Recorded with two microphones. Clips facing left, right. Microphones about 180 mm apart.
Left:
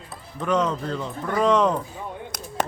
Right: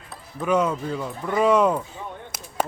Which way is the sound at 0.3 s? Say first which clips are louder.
Right 1 dB; 10° right (ahead or behind).